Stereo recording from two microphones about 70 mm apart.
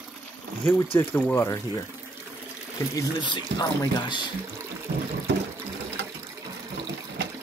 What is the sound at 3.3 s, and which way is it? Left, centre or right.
Speech, left.